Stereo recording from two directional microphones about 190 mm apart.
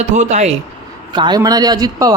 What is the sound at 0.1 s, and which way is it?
Speech, 40° right (ahead or behind).